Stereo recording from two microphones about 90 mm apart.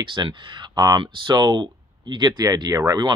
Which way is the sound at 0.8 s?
45° right (ahead or behind).